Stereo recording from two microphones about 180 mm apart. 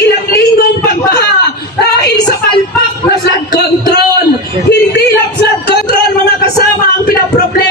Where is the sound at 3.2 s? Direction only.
65° left (ahead or behind).